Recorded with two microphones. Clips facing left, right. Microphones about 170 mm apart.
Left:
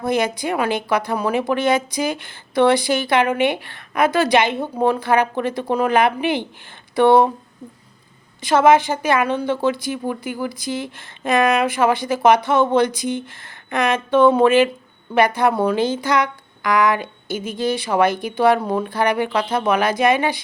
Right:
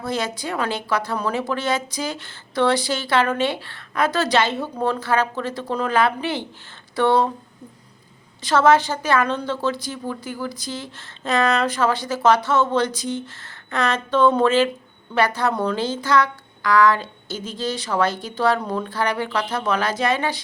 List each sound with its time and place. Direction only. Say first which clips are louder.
0.0 s a woman's voice: left 5 dB; 15° left (ahead or behind)
8.4 s a woman's voice: left 2 dB; 10° left (ahead or behind)
17.3 s a woman's voice: left 5 dB; 55° left (ahead or behind)
17.6 s a woman's voice: left 4 dB; 10° left (ahead or behind)